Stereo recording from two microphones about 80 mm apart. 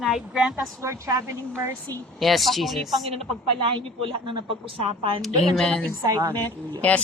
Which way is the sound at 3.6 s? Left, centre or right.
Right.